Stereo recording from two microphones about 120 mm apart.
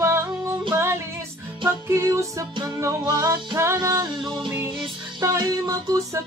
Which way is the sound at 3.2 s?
35° right (ahead or behind).